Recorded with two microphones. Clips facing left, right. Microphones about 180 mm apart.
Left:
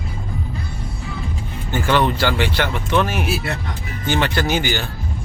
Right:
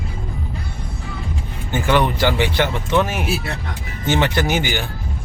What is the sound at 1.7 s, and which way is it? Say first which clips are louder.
Speech: even; 15° right (ahead or behind).